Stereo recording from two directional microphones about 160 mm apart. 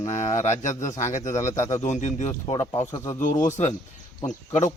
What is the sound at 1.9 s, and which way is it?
Speech, 50° left (ahead or behind).